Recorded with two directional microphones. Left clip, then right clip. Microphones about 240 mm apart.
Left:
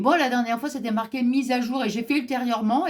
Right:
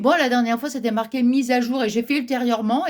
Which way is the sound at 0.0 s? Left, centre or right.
Right.